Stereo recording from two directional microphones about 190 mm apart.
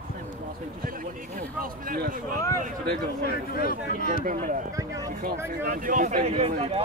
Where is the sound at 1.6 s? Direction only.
50° right (ahead or behind).